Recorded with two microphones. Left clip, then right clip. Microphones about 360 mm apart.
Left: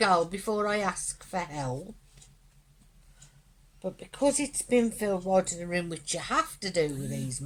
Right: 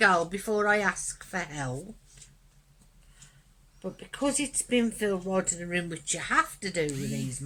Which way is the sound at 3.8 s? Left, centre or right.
Centre.